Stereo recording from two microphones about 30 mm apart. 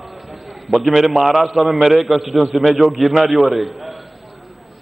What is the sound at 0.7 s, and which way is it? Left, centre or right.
Speech, centre.